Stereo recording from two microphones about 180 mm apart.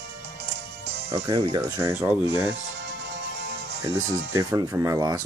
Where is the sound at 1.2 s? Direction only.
25° right (ahead or behind).